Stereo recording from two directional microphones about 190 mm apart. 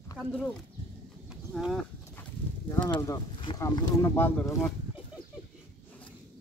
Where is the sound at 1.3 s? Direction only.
Centre (ahead or behind).